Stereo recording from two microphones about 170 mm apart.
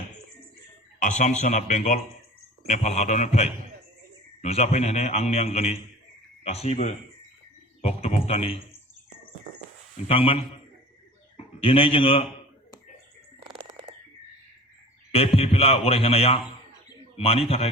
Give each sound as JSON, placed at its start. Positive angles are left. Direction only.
{"t": 1.0, "sound": "a man's voice", "side_deg": 45}
{"t": 10.1, "sound": "a man's voice", "side_deg": 35}
{"t": 11.6, "sound": "a man's voice", "side_deg": 30}
{"t": 13.5, "sound": "frog", "side_deg": -30}
{"t": 15.1, "sound": "a man's voice", "side_deg": 35}